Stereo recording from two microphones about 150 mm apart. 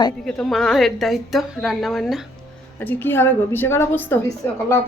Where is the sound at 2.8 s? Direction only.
15° left (ahead or behind).